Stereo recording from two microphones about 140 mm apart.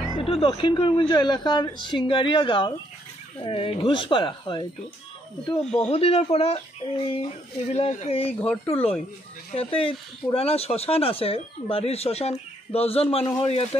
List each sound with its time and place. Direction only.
0.2 s speech: 40° left (ahead or behind)
5.6 s speech: 5° left (ahead or behind)
5.9 s speech: 45° left (ahead or behind)
8.3 s speech: 15° left (ahead or behind)
9.5 s speech: 40° left (ahead or behind)